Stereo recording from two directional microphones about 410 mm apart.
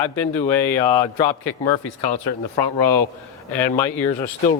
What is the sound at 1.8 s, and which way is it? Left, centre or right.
Speech, left.